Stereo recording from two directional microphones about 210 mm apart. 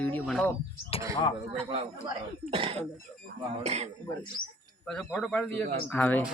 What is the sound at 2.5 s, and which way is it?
Speech, 25° right (ahead or behind).